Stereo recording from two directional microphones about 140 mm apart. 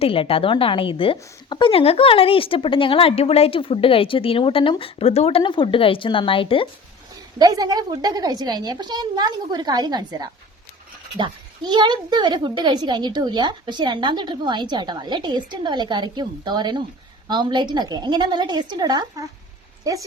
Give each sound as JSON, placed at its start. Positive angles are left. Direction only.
{"t": 0.0, "sound": "a woman's voice", "side_deg": 40}
{"t": 5.4, "sound": "a woman's voice", "side_deg": 35}
{"t": 7.3, "sound": "a woman's voice", "side_deg": -30}